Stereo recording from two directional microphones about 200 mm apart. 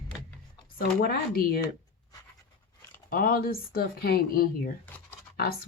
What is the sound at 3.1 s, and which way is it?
Speech, 45° left (ahead or behind).